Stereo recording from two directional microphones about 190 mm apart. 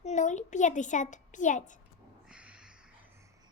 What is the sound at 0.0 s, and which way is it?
A child's voice, 40° left (ahead or behind).